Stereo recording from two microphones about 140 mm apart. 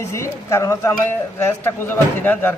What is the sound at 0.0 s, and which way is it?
A woman's voice, 20° left (ahead or behind).